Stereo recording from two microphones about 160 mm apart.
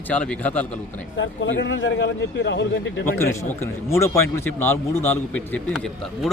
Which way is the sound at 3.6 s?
20° left (ahead or behind).